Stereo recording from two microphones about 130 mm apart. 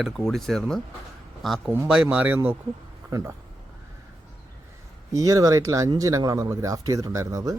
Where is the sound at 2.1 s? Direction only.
15° right (ahead or behind).